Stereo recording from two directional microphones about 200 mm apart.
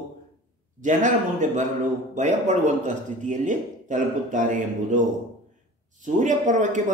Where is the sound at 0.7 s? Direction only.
40° right (ahead or behind).